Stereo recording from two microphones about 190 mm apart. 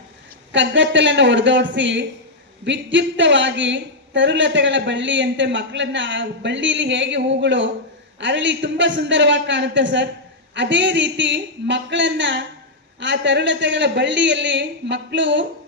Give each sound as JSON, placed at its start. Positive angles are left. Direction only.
{"t": 0.5, "sound": "a woman's voice", "side_deg": -75}